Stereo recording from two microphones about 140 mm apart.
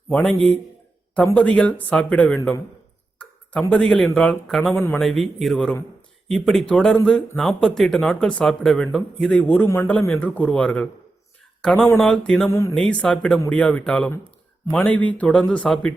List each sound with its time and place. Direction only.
0.1 s speech: 5° left (ahead or behind)
1.4 s speech: 10° left (ahead or behind)
3.2 s a sound: 10° left (ahead or behind)
3.7 s speech: 5° left (ahead or behind)
9.4 s speech: 10° left (ahead or behind)
12.5 s speech: 20° left (ahead or behind)
12.7 s speech: 5° left (ahead or behind)